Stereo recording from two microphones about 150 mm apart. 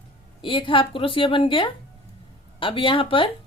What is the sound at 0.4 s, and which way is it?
A woman's voice, 35° left (ahead or behind).